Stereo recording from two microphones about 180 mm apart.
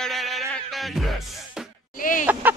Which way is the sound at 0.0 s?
Centre (ahead or behind).